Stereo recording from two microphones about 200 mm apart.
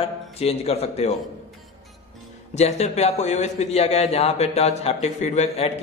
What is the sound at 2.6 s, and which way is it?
A man's voice, 35° left (ahead or behind).